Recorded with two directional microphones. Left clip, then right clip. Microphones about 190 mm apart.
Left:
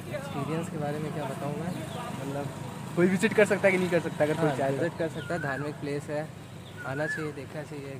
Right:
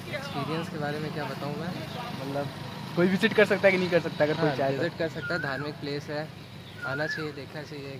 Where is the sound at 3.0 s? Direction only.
15° right (ahead or behind).